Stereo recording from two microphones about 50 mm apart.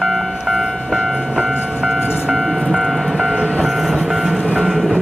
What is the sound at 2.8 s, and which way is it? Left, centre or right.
Train, centre.